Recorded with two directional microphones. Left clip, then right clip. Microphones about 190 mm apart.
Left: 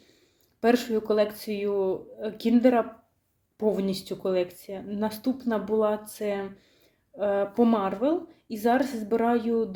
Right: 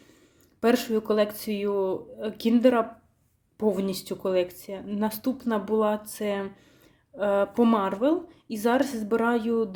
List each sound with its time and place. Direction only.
0.6 s speech: 25° right (ahead or behind)